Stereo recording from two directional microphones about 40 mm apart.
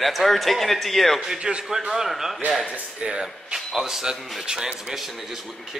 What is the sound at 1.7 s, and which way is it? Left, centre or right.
Speech, centre.